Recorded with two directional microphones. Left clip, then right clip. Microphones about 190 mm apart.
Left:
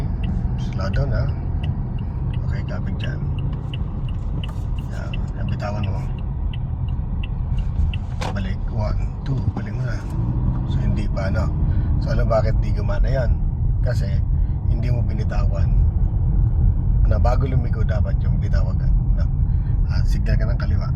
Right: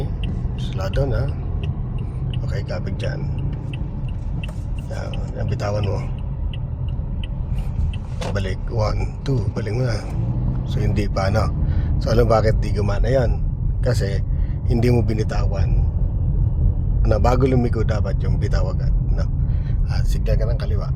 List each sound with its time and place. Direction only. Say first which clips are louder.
8.4 s speech: right 6 dB; 55° right (ahead or behind)
17.1 s speech: right 7 dB; 60° right (ahead or behind)